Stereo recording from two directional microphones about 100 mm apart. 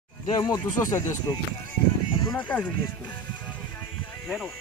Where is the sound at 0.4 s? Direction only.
40° left (ahead or behind).